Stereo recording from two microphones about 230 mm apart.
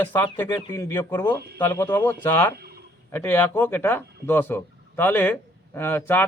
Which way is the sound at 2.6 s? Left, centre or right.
Right.